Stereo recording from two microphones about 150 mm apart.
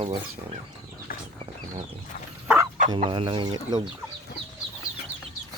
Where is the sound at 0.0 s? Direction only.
40° right (ahead or behind).